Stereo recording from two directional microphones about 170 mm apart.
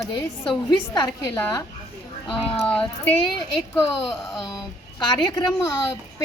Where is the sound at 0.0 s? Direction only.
25° left (ahead or behind).